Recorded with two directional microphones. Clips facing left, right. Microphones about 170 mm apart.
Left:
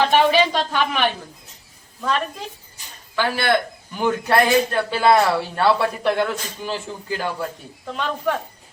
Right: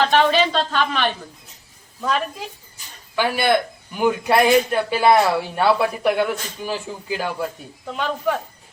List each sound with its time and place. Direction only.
0.1 s a woman's voice: 10° left (ahead or behind)
2.0 s a woman's voice: 5° right (ahead or behind)